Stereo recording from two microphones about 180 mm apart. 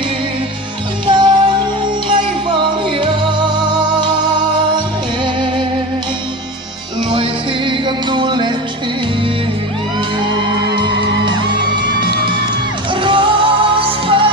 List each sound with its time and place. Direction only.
1.0 s music: 25° right (ahead or behind)
3.0 s music: 25° right (ahead or behind)
7.1 s music: 25° right (ahead or behind)
13.0 s music: 30° right (ahead or behind)